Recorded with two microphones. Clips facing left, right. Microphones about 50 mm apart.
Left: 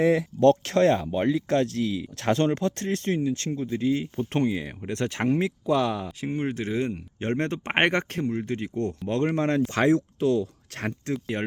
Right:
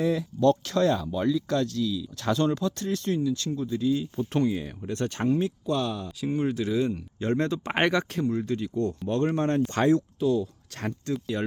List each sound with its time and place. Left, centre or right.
0.0 s speech: left
6.1 s speech: left
8.3 s speech: left
8.5 s speech: left
11.1 s speech: left